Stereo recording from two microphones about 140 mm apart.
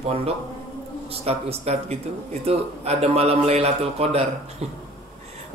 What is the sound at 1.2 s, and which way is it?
A man's voice, 45° right (ahead or behind).